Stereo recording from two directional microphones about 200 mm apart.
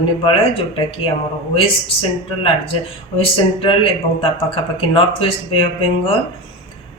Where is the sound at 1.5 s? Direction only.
25° left (ahead or behind).